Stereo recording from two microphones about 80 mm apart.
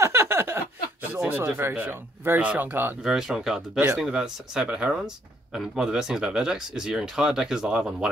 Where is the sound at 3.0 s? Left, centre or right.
Centre.